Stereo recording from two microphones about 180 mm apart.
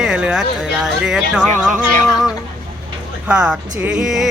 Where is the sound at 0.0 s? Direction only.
5° right (ahead or behind).